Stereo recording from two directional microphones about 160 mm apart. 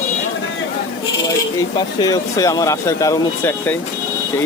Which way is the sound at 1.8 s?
25° left (ahead or behind).